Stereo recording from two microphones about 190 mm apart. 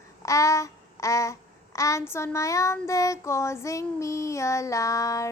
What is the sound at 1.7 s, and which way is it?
Child singing, 15° left (ahead or behind).